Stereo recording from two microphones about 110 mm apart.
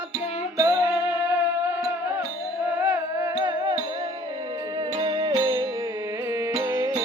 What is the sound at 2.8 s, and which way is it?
Music, 25° right (ahead or behind).